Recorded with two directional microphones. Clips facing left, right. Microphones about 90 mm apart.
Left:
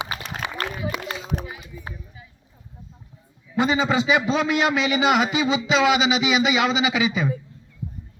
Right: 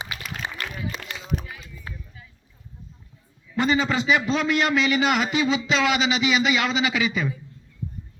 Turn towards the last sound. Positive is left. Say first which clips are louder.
# left 2 dB
turn(degrees=5)  # may be behind; listen again after turning